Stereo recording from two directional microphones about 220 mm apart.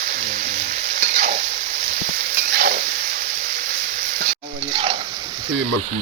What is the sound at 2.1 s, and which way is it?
Stir, 45° right (ahead or behind).